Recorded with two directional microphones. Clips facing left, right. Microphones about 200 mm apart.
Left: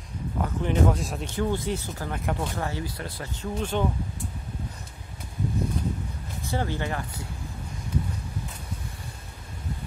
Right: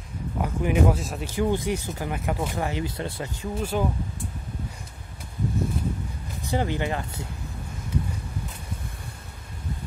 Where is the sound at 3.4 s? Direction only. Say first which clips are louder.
Even; 10° right (ahead or behind).